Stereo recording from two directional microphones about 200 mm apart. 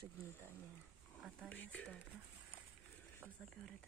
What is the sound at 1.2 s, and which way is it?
Speech, 5° left (ahead or behind).